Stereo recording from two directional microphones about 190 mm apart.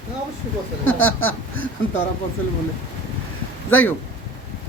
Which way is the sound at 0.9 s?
90° left.